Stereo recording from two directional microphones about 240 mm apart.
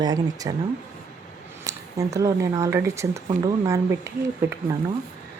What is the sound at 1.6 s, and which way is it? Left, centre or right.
Speech, centre.